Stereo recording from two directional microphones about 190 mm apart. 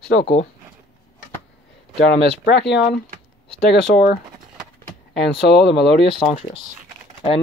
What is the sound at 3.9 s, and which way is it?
Speech, 55° left (ahead or behind).